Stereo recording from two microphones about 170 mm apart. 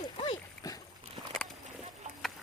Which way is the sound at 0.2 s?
25° left (ahead or behind).